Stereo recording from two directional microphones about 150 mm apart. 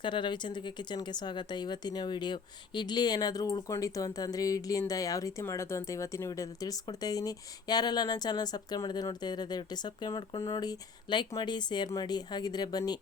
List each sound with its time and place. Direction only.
0.0 s speech: 30° left (ahead or behind)